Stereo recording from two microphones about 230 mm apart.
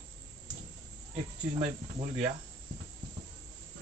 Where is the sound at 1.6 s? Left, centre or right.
Right.